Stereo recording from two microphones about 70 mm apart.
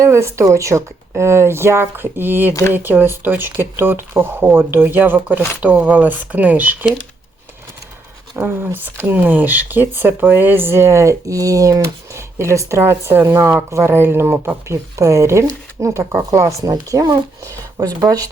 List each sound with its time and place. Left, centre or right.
0.0 s speech: right
5.5 s speech: centre
8.4 s speech: right
17.7 s speech: right